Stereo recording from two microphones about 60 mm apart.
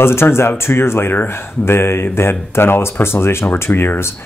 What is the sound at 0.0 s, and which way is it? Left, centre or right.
Speech, left.